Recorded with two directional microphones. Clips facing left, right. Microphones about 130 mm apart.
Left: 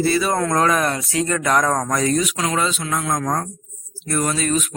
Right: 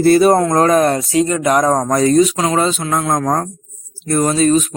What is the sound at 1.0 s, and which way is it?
Speech, 20° right (ahead or behind).